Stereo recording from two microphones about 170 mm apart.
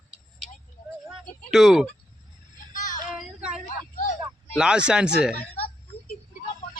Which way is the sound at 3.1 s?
5° right (ahead or behind).